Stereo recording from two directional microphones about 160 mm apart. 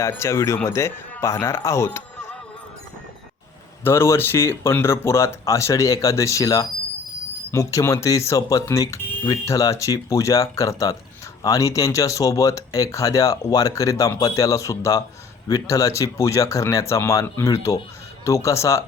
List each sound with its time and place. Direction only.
0.0 s speech: 15° left (ahead or behind)
3.8 s speech: 15° left (ahead or behind)